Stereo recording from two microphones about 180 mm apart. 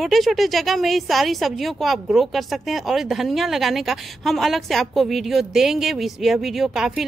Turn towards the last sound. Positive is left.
turn(degrees=0)  # may be behind; listen again after turning